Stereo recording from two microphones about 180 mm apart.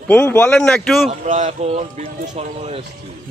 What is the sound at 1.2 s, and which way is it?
Speech, 40° right (ahead or behind).